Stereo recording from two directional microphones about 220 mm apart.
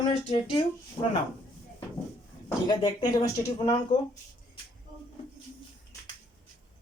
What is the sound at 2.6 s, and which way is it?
Speech, 20° left (ahead or behind).